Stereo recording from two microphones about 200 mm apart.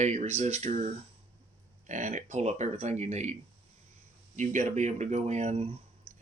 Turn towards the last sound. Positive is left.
turn(degrees=-30)  # may be behind; listen again after turning